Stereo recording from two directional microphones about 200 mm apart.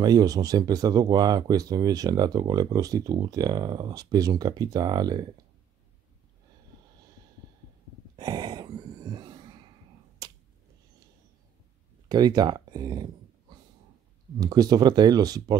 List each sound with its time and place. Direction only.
0.0 s speech: 20° right (ahead or behind)
8.2 s gasp: 20° right (ahead or behind)
10.2 s a sound: 20° right (ahead or behind)
12.1 s speech: 20° right (ahead or behind)